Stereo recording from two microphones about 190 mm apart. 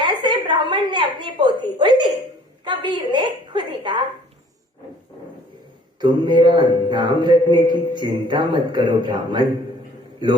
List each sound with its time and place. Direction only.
0.0 s a woman's voice: 25° right (ahead or behind)
6.0 s speech: 25° right (ahead or behind)